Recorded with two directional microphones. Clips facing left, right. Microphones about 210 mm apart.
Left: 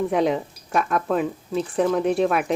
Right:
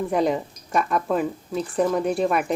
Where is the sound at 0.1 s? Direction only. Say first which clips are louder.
Left 1 dB; centre (ahead or behind).